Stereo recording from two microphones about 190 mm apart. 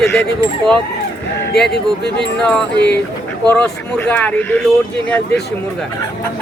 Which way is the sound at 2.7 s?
65° left (ahead or behind).